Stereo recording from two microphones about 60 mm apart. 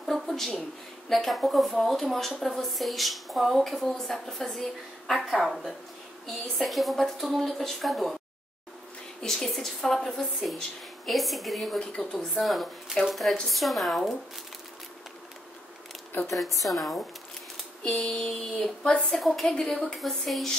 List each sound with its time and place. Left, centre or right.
0.0 s a sound: centre
1.0 s a woman's voice: centre
9.2 s a woman's voice: centre
11.8 s a woman's voice: centre
12.1 s a woman's voice: centre
16.3 s a woman's voice: centre
17.8 s a woman's voice: centre